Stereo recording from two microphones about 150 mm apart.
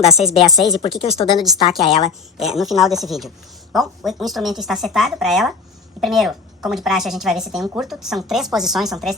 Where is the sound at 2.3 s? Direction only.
Centre (ahead or behind).